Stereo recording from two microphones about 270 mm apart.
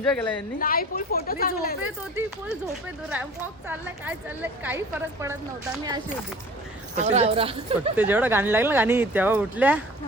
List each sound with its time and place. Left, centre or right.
0.0 s speech: centre
0.6 s a woman's voice: left
1.8 s speech: centre
6.9 s speech: right
7.9 s speech: centre